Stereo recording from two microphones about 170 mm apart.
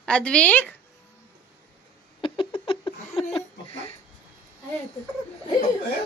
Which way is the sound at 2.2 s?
30° left (ahead or behind).